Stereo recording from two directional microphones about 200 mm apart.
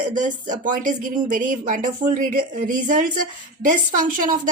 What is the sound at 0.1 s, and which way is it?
Speech, 40° right (ahead or behind).